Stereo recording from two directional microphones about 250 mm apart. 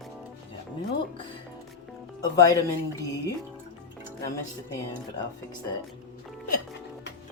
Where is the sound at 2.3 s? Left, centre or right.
Centre.